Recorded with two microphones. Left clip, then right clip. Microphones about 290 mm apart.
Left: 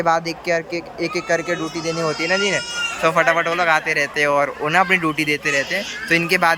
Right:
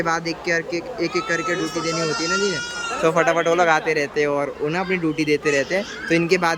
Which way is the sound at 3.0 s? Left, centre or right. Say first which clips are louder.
Left 1 dB; centre.